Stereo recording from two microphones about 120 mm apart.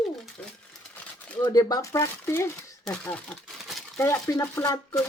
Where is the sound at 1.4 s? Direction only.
35° left (ahead or behind).